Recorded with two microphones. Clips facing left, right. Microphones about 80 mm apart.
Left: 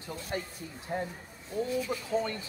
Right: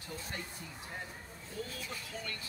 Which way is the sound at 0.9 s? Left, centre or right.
Left.